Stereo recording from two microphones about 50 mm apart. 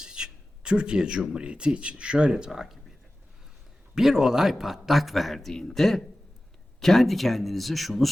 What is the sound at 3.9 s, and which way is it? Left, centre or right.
A man's voice, centre.